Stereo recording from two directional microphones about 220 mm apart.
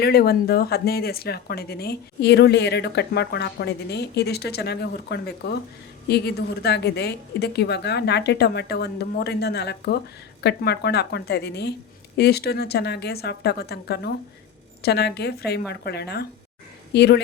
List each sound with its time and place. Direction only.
0.0 s speech: 45° left (ahead or behind)